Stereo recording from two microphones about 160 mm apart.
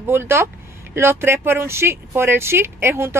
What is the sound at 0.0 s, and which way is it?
Speech, 15° right (ahead or behind).